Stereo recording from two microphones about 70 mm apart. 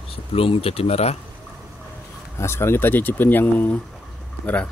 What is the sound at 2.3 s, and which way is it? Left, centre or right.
Speech, left.